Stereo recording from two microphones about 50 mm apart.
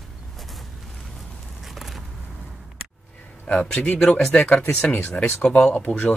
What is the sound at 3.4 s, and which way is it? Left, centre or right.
Speech, left.